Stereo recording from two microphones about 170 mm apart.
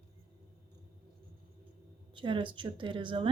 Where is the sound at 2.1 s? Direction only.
30° right (ahead or behind).